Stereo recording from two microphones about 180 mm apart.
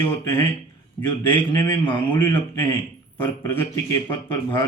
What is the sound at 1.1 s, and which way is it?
A man's voice, 30° left (ahead or behind).